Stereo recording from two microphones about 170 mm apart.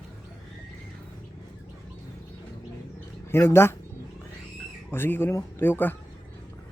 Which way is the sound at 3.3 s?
15° left (ahead or behind).